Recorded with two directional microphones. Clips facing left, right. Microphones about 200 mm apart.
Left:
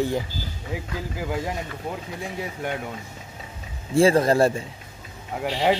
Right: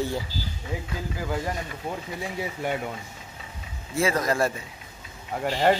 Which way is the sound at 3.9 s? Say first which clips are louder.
Left 7 dB; 30° left (ahead or behind).